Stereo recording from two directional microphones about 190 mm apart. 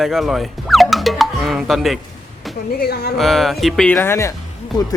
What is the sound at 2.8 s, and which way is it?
Speech, 55° left (ahead or behind).